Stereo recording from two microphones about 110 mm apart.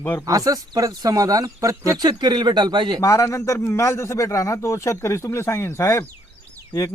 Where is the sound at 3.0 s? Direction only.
30° left (ahead or behind).